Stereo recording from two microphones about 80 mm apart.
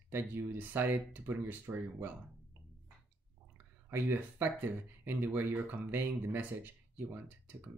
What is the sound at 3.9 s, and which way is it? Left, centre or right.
Speech, right.